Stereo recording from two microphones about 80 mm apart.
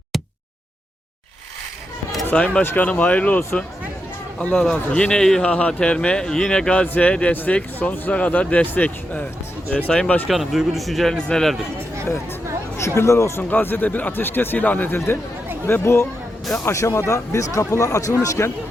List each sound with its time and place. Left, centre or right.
2.3 s speech: centre
10.2 s speech: centre
13.0 s speech: left
13.5 s speech: left
14.9 s speech: left